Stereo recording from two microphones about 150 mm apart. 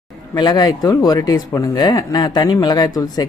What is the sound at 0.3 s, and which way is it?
Speech, 25° left (ahead or behind).